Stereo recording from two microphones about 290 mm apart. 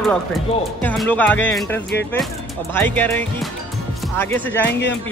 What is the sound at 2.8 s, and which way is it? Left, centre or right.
Music, centre.